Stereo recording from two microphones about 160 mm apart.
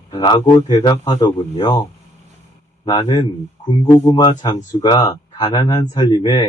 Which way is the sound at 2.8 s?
25° left (ahead or behind).